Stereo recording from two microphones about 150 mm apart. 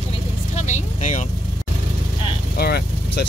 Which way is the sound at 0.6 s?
50° left (ahead or behind).